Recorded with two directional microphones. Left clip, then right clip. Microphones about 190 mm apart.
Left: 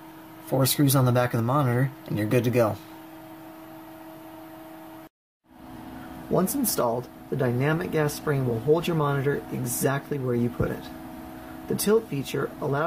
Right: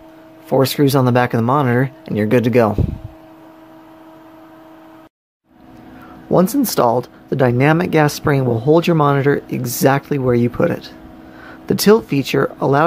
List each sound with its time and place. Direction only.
0.5 s speech: 45° right (ahead or behind)
6.3 s speech: 40° right (ahead or behind)